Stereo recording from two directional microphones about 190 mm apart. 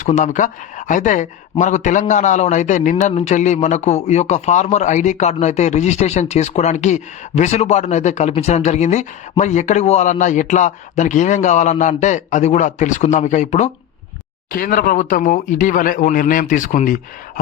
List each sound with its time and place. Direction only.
0.0 s speech: 40° left (ahead or behind)